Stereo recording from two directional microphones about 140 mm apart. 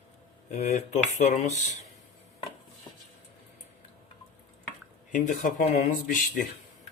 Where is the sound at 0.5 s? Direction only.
55° left (ahead or behind).